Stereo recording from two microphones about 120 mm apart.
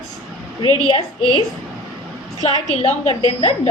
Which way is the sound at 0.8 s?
45° left (ahead or behind).